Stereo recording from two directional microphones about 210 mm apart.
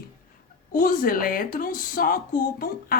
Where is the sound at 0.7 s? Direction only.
45° left (ahead or behind).